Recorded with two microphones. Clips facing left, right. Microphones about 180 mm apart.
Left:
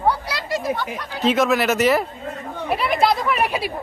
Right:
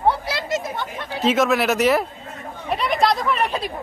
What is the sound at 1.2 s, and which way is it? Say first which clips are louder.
Speech: even; centre (ahead or behind).